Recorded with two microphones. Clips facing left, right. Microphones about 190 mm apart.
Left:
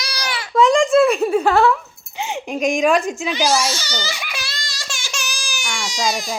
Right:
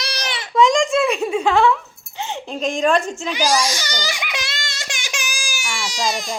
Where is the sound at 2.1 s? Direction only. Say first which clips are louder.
Left 3 dB; 15° left (ahead or behind).